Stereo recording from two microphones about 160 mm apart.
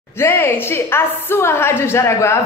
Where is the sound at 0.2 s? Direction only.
15° left (ahead or behind).